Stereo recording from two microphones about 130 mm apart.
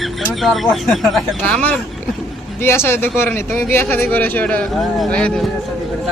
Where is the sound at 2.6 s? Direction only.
20° left (ahead or behind).